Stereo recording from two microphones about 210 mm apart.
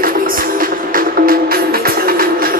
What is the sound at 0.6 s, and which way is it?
Music, 45° right (ahead or behind).